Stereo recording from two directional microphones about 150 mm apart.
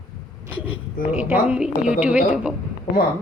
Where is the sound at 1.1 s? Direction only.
10° right (ahead or behind).